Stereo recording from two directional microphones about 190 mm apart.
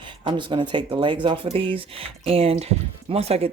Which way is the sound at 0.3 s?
25° right (ahead or behind).